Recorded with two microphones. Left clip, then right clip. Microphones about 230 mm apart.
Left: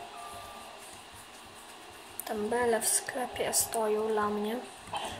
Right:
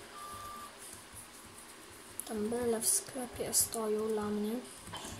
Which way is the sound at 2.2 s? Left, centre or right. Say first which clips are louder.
Left 5 dB; left.